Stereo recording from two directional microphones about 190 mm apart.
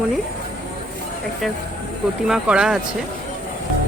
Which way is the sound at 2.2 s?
5° right (ahead or behind).